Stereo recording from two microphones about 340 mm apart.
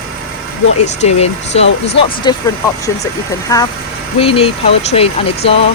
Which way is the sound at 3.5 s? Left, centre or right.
Centre.